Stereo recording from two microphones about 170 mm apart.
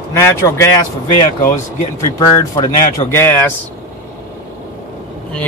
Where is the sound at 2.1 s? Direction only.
20° left (ahead or behind).